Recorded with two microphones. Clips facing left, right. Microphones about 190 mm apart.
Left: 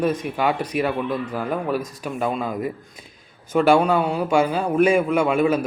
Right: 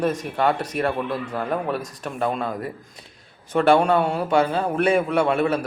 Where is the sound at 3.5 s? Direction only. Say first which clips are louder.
Left 1 dB; 5° left (ahead or behind).